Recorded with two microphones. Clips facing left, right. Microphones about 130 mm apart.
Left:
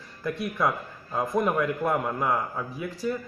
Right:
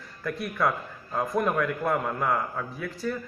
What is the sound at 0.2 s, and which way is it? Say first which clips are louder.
A man's voice: left 1 dB; 20° left (ahead or behind).